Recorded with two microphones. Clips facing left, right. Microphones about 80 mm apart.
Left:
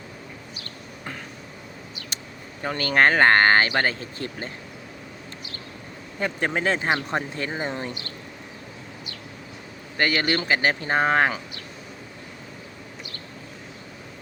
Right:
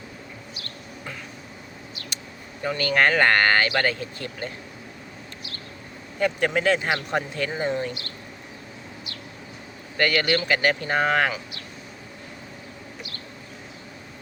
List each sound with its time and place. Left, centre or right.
2.6 s speech: left
6.1 s speech: left
10.0 s speech: left